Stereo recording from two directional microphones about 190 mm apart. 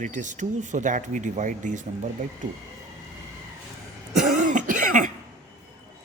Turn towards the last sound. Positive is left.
turn(degrees=-40)  # may be behind; listen again after turning